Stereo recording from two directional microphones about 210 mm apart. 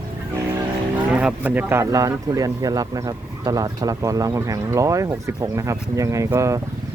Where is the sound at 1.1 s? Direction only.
5° right (ahead or behind).